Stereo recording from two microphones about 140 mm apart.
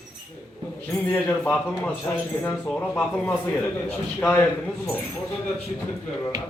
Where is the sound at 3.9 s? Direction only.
15° left (ahead or behind).